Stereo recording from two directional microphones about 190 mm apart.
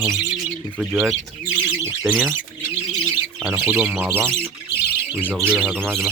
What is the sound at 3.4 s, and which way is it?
Speech, 10° right (ahead or behind).